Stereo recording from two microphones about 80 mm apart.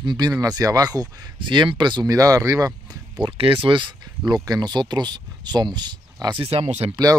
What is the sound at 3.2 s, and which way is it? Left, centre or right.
Speech, right.